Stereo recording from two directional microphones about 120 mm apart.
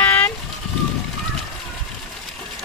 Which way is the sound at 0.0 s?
15° left (ahead or behind).